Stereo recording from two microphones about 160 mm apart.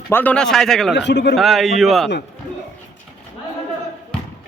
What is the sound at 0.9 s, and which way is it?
Speech, 90° left.